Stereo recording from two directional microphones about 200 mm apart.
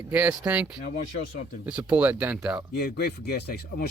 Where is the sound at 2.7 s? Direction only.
50° left (ahead or behind).